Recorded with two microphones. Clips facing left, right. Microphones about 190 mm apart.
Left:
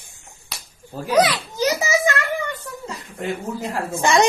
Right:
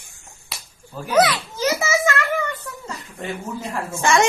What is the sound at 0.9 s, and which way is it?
Speech, 35° left (ahead or behind).